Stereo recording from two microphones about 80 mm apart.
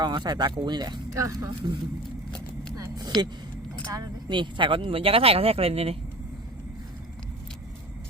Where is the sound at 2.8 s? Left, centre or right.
Right.